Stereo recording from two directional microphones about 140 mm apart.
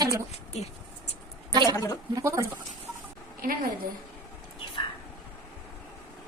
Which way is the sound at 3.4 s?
90° right.